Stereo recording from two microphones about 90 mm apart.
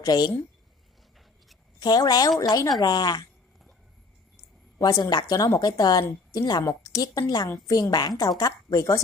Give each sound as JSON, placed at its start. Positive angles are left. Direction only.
{"t": 0.0, "sound": "speech", "side_deg": 45}
{"t": 1.8, "sound": "a woman's voice", "side_deg": 45}
{"t": 4.7, "sound": "a woman's voice", "side_deg": 40}
{"t": 7.6, "sound": "speech", "side_deg": 35}
{"t": 8.3, "sound": "speech", "side_deg": 45}